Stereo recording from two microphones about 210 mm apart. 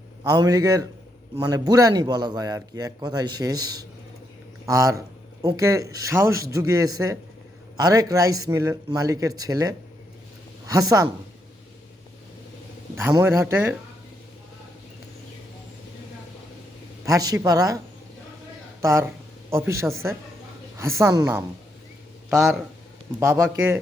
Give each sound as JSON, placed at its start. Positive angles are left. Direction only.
{"t": 0.3, "sound": "speech", "side_deg": -20}
{"t": 13.0, "sound": "speech", "side_deg": -15}
{"t": 17.1, "sound": "speech", "side_deg": -15}
{"t": 18.8, "sound": "speech", "side_deg": -15}
{"t": 22.3, "sound": "speech", "side_deg": 0}
{"t": 23.2, "sound": "speech", "side_deg": -15}